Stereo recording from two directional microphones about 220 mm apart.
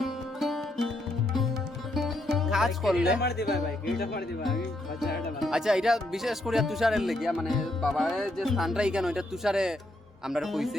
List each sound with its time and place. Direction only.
0.0 s music: centre (ahead or behind)
2.0 s music: centre (ahead or behind)
3.2 s speech: 45° left (ahead or behind)
4.4 s speech: centre (ahead or behind)